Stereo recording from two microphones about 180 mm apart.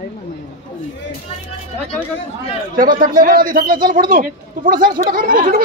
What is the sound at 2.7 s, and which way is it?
Speech, 50° right (ahead or behind).